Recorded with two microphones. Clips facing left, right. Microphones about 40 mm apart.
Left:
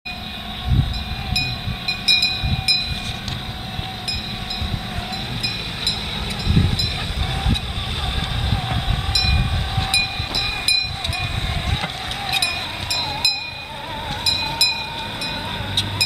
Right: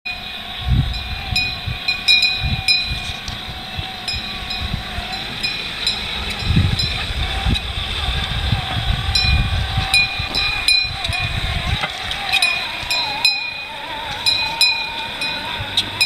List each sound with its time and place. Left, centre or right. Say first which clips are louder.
1.3 s train: right 3 dB; centre
8.6 s train: right 1 dB; centre
11.8 s music: right 3 dB; right
14.2 s a sound: right 4 dB; right
14.5 s vehicle: right 4 dB; right